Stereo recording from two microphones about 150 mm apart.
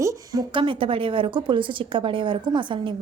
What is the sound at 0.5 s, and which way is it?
A woman's voice, 35° right (ahead or behind).